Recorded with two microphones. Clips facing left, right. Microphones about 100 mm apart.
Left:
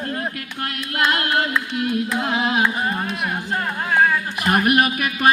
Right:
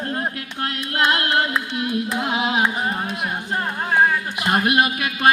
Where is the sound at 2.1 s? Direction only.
20° right (ahead or behind).